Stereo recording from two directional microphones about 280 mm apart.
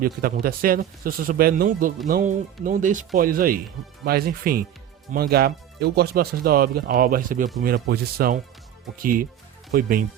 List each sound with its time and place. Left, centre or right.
0.0 s speech: right